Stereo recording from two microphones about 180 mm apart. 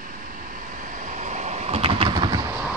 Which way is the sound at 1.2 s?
40° right (ahead or behind).